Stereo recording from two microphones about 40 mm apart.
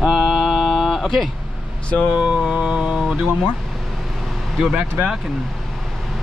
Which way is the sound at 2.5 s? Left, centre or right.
Right.